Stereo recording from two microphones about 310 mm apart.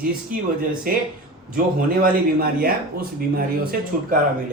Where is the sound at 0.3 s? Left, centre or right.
Right.